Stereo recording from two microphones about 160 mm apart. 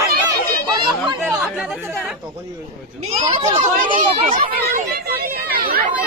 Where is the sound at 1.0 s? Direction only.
5° right (ahead or behind).